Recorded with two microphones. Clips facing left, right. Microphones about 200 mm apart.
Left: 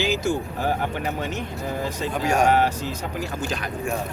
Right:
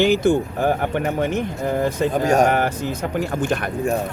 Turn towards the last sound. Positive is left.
turn(degrees=-55)  # may be behind; listen again after turning